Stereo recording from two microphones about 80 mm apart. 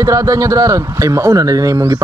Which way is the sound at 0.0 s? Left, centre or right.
Right.